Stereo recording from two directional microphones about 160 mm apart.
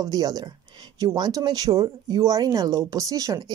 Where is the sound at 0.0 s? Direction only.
20° right (ahead or behind).